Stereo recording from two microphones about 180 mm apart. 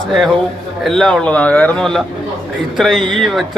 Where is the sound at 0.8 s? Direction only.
5° left (ahead or behind).